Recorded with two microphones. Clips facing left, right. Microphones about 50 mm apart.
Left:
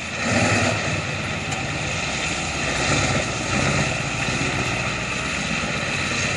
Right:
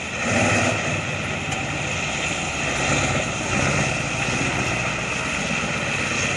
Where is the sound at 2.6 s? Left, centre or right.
Right.